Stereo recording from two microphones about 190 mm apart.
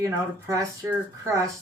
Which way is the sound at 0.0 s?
15° right (ahead or behind).